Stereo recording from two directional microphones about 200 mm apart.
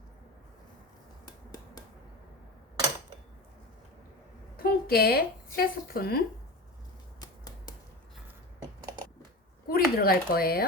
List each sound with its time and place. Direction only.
1.2 s a sound: 20° left (ahead or behind)
4.5 s a woman's voice: 50° left (ahead or behind)
7.2 s finger snapping: 20° left (ahead or behind)
9.6 s speech: 45° left (ahead or behind)